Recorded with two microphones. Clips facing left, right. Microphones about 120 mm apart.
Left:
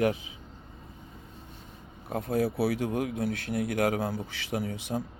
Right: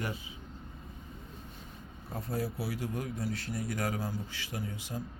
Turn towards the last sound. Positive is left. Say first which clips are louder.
# left 8 dB
turn(degrees=80)